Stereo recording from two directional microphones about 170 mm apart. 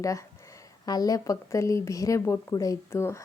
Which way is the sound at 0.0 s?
20° left (ahead or behind).